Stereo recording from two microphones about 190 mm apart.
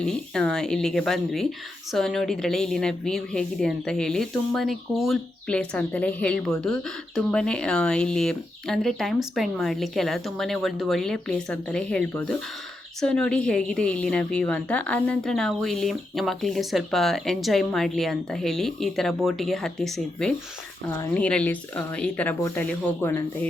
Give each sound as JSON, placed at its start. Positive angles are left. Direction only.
{"t": 0.0, "sound": "a woman's voice", "side_deg": 5}